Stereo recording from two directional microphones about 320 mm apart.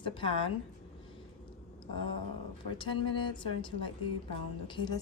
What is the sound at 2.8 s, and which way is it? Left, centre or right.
A woman's voice, centre.